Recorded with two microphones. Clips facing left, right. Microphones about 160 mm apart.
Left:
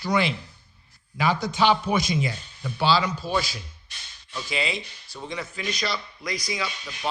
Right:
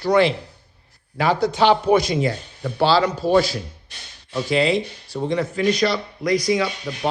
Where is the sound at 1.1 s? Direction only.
65° right (ahead or behind).